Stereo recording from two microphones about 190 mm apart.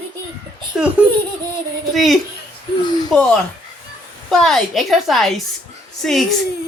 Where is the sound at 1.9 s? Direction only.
Centre (ahead or behind).